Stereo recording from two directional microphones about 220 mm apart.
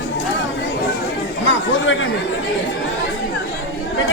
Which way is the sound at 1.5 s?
60° left (ahead or behind).